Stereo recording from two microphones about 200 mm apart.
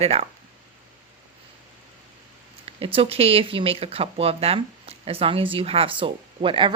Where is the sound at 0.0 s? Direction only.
30° right (ahead or behind).